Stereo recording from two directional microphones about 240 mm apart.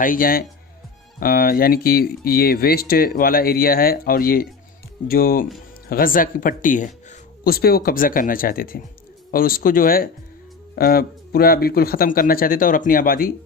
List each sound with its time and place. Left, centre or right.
0.0 s speech: left